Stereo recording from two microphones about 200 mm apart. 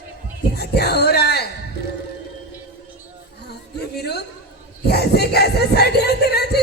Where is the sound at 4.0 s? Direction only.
55° left (ahead or behind).